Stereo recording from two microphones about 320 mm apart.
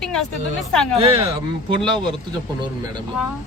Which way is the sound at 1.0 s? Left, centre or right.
Centre.